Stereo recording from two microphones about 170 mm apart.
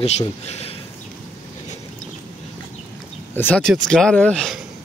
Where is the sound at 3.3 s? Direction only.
10° left (ahead or behind).